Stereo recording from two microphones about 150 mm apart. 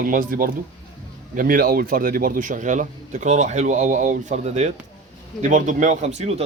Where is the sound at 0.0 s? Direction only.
65° right (ahead or behind).